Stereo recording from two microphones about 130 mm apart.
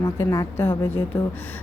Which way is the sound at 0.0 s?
20° left (ahead or behind).